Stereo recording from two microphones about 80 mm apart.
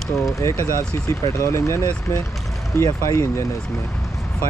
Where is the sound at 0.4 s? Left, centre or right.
Left.